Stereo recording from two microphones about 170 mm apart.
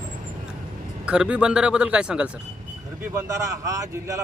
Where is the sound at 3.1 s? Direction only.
15° right (ahead or behind).